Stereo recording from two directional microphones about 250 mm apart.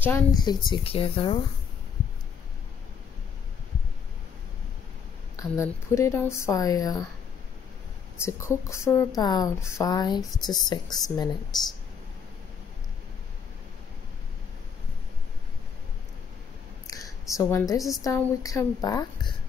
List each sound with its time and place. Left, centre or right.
0.0 s speech: centre
5.3 s speech: centre
8.3 s speech: centre
16.8 s a woman's voice: centre